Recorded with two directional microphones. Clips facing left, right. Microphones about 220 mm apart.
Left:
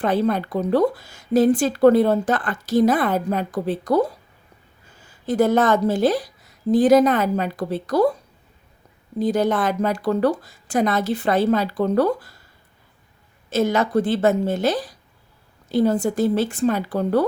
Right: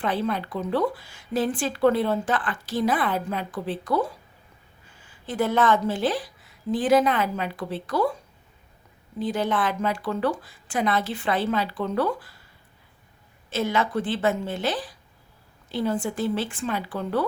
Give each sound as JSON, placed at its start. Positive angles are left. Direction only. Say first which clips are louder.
{"t": 0.0, "sound": "speech", "louder": "left 6 dB", "side_deg": 40}
{"t": 9.1, "sound": "speech", "louder": "left 6 dB", "side_deg": 40}
{"t": 13.5, "sound": "speech", "louder": "left 6 dB", "side_deg": 40}